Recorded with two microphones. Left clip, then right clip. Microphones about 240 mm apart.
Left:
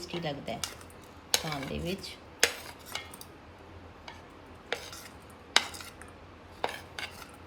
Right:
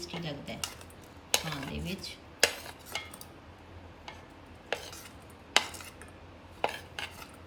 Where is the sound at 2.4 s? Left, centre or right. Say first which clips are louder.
Even; centre.